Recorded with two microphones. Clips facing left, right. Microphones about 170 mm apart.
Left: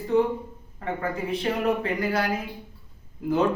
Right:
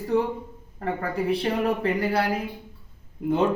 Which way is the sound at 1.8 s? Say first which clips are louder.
Right 2 dB; 30° right (ahead or behind).